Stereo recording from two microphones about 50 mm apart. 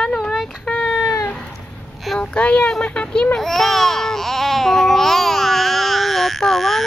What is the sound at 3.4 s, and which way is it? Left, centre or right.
Baby cry, centre.